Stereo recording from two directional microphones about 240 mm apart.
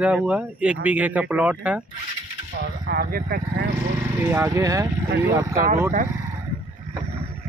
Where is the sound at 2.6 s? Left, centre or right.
Right.